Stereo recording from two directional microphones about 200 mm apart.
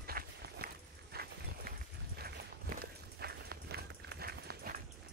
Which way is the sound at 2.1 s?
50° right (ahead or behind).